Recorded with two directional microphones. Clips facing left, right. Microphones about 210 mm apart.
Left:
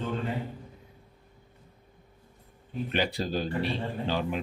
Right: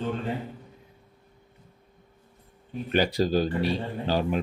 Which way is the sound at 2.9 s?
40° right (ahead or behind).